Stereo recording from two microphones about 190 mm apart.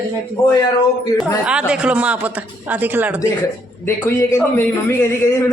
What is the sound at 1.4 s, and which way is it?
Speech, 5° right (ahead or behind).